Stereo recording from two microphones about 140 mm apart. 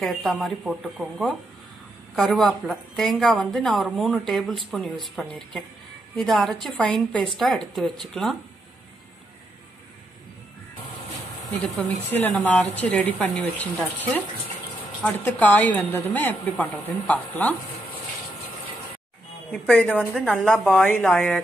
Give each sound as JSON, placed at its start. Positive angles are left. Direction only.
{"t": 0.0, "sound": "a woman's voice", "side_deg": 0}
{"t": 11.5, "sound": "a woman's voice", "side_deg": 15}
{"t": 19.5, "sound": "a woman's voice", "side_deg": 5}